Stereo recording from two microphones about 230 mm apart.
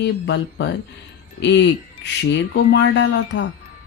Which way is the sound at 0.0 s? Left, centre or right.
Left.